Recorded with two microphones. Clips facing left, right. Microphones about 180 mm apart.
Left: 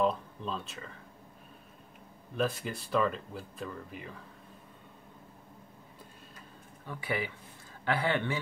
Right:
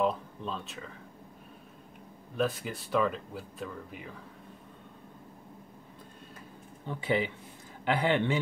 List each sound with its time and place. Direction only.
0.0 s speech: centre (ahead or behind)
2.3 s speech: centre (ahead or behind)
6.9 s a man's voice: 20° right (ahead or behind)